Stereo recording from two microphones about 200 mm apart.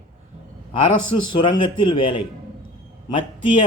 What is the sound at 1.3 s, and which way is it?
Speech, 25° left (ahead or behind).